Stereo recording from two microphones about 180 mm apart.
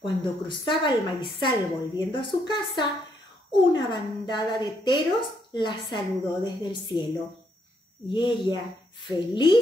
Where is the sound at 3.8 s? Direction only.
25° left (ahead or behind).